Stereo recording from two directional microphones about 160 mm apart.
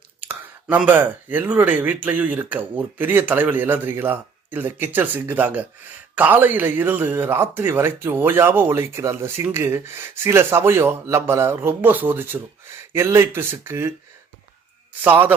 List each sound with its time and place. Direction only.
0.2 s speech: 10° right (ahead or behind)
15.0 s speech: 10° right (ahead or behind)